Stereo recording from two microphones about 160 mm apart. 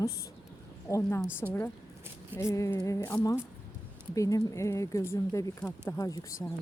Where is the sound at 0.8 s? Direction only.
20° left (ahead or behind).